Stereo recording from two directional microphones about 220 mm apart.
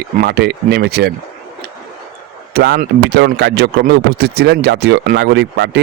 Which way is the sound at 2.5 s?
45° right (ahead or behind).